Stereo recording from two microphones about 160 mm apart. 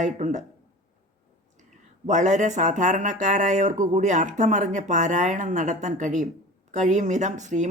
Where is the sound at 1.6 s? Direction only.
50° right (ahead or behind).